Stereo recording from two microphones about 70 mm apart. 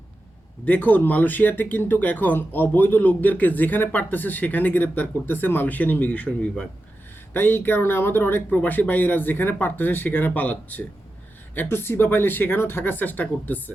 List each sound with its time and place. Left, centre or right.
0.6 s speech: left
7.3 s speech: left